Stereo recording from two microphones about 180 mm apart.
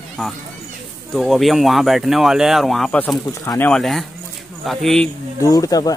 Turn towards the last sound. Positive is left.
turn(degrees=20)  # may be behind; listen again after turning